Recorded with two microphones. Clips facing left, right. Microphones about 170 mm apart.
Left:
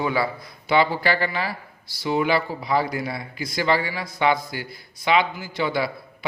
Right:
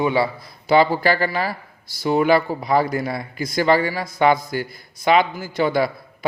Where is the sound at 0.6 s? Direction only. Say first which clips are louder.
Right 4 dB; 40° right (ahead or behind).